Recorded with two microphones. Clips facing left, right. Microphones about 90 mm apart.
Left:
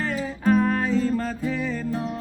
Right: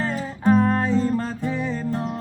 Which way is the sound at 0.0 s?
30° right (ahead or behind).